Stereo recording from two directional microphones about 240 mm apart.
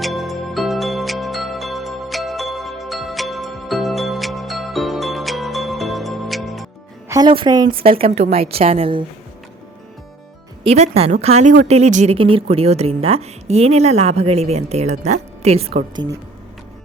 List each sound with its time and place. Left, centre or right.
0.0 s music: centre
7.1 s speech: centre
10.6 s speech: right